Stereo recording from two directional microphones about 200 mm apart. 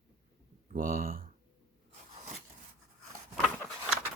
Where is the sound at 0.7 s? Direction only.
45° right (ahead or behind).